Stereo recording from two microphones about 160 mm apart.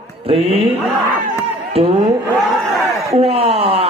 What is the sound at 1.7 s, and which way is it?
Speech, 40° right (ahead or behind).